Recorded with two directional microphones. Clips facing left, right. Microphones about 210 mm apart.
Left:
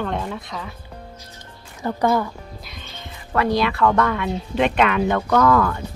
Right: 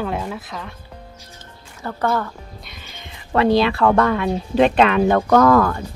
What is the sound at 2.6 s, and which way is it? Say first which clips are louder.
Music: left 2 dB; centre (ahead or behind).